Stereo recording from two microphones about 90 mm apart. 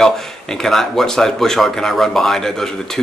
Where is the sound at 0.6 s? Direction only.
5° left (ahead or behind).